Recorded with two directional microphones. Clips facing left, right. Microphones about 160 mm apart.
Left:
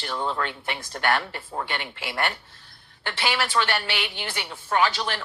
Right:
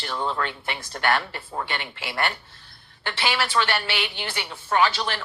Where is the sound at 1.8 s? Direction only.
50° left (ahead or behind).